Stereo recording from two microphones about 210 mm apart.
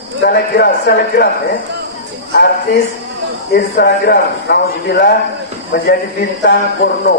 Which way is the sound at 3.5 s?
50° left (ahead or behind).